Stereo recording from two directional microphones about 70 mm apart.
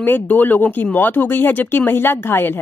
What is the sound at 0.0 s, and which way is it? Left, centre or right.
Speech, left.